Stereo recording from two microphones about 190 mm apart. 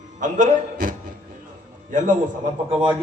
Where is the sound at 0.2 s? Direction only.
40° right (ahead or behind).